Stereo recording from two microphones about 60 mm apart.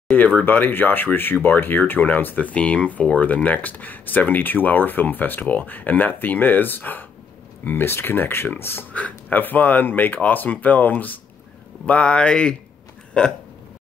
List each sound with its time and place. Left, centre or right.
0.1 s speech: left
8.9 s speech: left
11.8 s speech: centre